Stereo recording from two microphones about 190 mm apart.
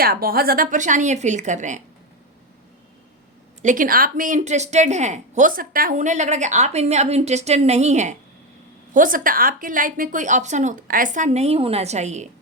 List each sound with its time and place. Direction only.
0.0 s a woman's voice: 50° right (ahead or behind)
3.6 s a woman's voice: 45° right (ahead or behind)